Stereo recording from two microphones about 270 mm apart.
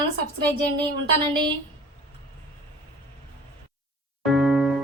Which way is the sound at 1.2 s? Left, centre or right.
Centre.